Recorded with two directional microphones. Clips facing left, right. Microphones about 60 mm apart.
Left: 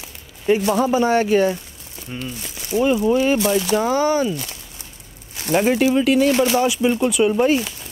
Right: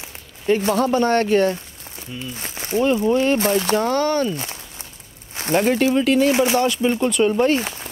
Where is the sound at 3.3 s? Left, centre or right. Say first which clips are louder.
Even; right.